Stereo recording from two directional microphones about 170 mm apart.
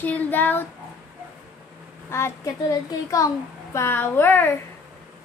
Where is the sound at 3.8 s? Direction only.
15° left (ahead or behind).